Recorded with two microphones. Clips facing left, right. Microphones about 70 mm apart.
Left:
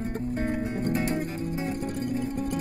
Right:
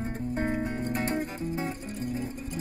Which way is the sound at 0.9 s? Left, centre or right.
Right.